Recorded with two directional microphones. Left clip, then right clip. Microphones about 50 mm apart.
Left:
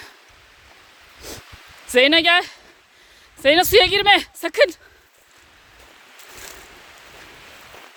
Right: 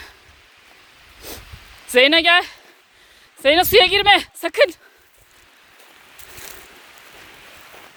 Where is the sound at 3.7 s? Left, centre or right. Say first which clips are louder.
Right 3 dB; left.